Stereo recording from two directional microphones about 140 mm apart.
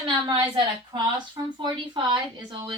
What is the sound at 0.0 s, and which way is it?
A woman's voice, 35° right (ahead or behind).